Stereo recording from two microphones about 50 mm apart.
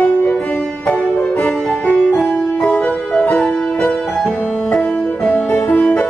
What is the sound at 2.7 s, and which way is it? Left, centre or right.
Music, left.